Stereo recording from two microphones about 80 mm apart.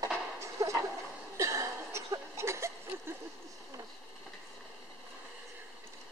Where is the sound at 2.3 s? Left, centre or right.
Right.